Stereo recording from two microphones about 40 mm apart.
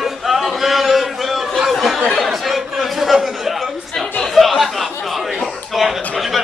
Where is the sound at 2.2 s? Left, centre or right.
Centre.